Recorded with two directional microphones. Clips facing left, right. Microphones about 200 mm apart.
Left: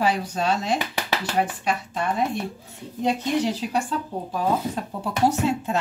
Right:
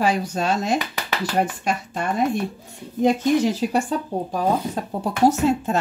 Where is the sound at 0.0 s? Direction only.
45° right (ahead or behind).